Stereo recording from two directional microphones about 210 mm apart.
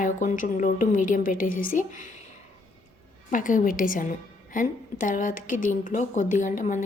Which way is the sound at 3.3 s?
40° left (ahead or behind).